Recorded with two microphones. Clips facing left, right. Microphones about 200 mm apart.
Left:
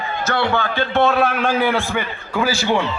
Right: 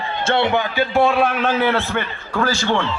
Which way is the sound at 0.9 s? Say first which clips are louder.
Even; centre (ahead or behind).